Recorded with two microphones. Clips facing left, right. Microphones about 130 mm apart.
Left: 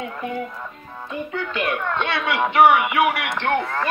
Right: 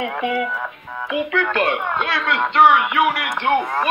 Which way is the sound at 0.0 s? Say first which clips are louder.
Right 6 dB; 85° right.